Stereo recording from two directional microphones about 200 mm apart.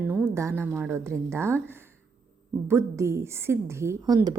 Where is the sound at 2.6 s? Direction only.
15° right (ahead or behind).